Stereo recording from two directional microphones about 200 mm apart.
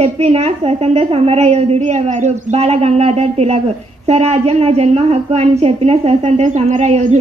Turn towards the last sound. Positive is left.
turn(degrees=-35)  # may be behind; listen again after turning